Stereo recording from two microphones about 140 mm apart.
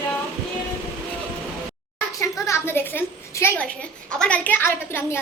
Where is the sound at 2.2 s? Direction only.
15° left (ahead or behind).